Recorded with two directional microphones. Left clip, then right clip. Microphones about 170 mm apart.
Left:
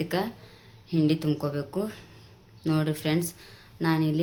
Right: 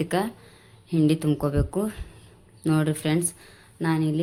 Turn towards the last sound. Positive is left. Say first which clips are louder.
# right 1 dB
turn(degrees=-25)  # may be behind; listen again after turning